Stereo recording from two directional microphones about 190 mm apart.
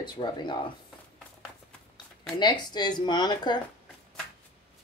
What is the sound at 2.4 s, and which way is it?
Speech, 20° left (ahead or behind).